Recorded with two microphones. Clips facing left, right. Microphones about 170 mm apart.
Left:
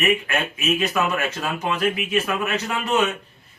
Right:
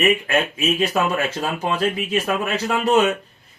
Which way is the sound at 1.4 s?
30° right (ahead or behind).